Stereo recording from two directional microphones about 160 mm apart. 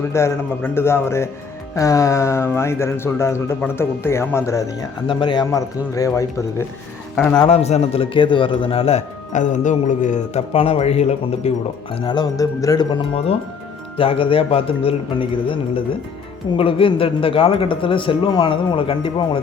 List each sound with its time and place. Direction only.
0.0 s speech: 15° left (ahead or behind)
7.2 s speech: 10° left (ahead or behind)
7.4 s a man's voice: 40° left (ahead or behind); by 12.8 s 20° left (ahead or behind)
13.9 s a man's voice: 35° left (ahead or behind)